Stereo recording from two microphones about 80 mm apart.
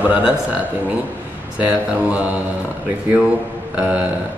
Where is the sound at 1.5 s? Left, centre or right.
Centre.